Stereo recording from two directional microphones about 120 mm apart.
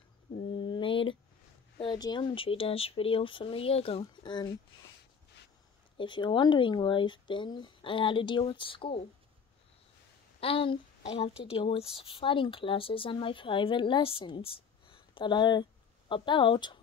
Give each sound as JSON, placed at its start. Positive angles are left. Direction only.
{"t": 0.4, "sound": "mantra", "side_deg": 45}
{"t": 1.8, "sound": "speech", "side_deg": 40}
{"t": 4.0, "sound": "speech", "side_deg": 40}
{"t": 5.9, "sound": "speech", "side_deg": 40}
{"t": 10.4, "sound": "speech", "side_deg": 50}